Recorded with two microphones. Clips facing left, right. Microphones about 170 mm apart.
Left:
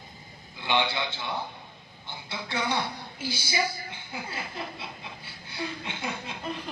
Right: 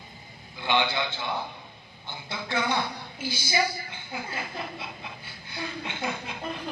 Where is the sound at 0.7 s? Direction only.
30° left (ahead or behind).